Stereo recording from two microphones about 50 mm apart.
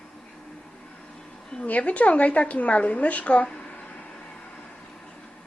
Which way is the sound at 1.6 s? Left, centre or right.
Left.